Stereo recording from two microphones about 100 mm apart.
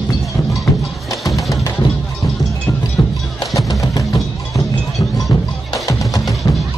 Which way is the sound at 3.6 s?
35° left (ahead or behind).